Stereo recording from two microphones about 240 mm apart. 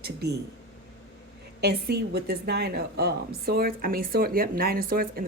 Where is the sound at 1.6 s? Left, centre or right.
Right.